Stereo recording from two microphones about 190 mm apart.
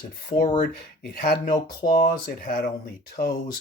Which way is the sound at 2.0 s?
50° left (ahead or behind).